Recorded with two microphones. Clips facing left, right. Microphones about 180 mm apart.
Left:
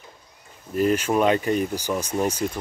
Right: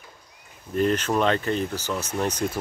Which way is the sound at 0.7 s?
5° left (ahead or behind).